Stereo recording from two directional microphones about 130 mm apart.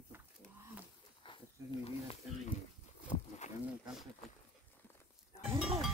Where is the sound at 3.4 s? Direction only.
65° left (ahead or behind).